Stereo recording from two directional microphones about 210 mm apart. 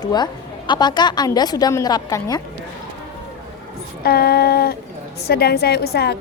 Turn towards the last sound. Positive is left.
turn(degrees=50)  # may be behind; listen again after turning